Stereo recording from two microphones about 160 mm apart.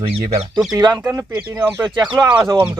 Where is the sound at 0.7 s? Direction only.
25° right (ahead or behind).